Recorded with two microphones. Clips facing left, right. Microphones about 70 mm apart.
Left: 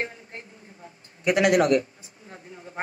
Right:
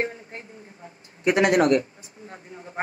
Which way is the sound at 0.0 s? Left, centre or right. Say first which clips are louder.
Right 4 dB; right.